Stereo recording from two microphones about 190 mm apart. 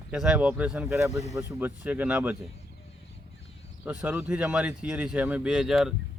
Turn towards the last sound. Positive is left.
turn(degrees=0)  # may be behind; listen again after turning